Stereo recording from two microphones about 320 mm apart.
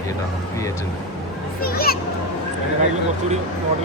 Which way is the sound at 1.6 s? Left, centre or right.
Left.